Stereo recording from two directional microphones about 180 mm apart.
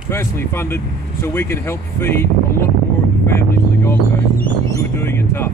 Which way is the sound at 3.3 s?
15° left (ahead or behind).